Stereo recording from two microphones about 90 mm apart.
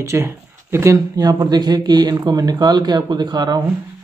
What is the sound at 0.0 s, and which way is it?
Speech, 30° right (ahead or behind).